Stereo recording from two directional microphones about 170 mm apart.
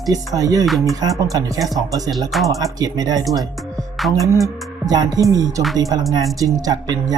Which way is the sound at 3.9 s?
Centre (ahead or behind).